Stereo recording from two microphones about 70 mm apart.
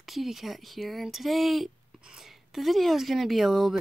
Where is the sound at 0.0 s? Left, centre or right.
Centre.